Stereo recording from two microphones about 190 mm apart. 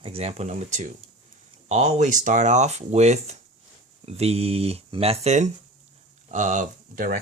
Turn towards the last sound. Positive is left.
turn(degrees=-45)  # may be behind; listen again after turning